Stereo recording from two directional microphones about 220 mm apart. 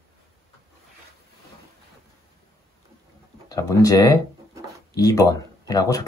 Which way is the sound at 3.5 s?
15° left (ahead or behind).